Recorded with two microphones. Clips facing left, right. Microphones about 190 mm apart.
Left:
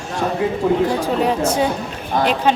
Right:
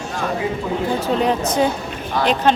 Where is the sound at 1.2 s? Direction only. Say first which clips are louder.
Left 1 dB; 10° left (ahead or behind).